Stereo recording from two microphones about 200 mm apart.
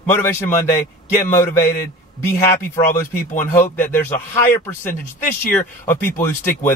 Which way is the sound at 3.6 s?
40° left (ahead or behind).